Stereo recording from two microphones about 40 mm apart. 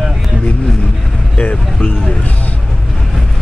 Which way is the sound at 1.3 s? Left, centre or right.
Left.